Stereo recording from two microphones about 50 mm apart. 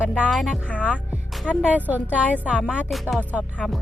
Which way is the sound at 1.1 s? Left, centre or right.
Right.